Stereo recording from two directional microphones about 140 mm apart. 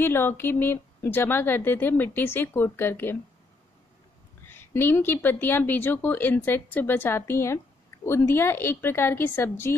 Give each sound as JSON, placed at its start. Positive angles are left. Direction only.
{"t": 0.0, "sound": "a woman's voice", "side_deg": 15}
{"t": 4.5, "sound": "a woman's voice", "side_deg": 15}